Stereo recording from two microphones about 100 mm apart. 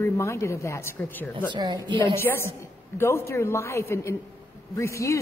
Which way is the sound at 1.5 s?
50° right (ahead or behind).